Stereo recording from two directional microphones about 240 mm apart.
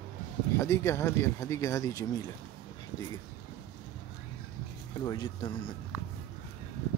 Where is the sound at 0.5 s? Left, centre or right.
Centre.